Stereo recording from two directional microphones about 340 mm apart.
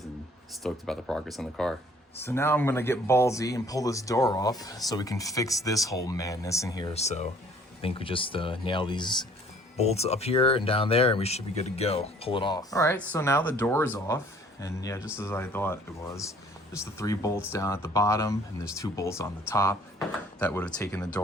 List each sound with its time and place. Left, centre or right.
0.6 s speech: centre